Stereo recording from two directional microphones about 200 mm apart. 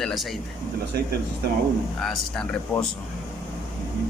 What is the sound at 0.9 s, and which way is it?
Speech, 50° right (ahead or behind).